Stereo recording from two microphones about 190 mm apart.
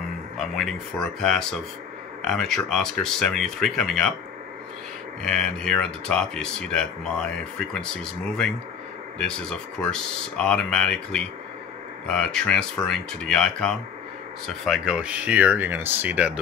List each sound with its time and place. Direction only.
0.4 s speech: centre (ahead or behind)
5.2 s speech: 5° left (ahead or behind)